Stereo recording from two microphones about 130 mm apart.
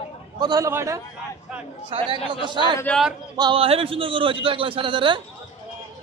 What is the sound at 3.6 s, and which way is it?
A man's voice, 45° right (ahead or behind).